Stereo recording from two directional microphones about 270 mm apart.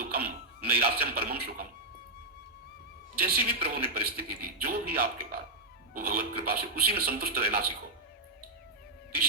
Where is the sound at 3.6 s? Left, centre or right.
Right.